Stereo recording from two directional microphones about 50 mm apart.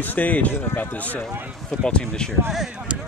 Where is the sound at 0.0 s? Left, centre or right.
Left.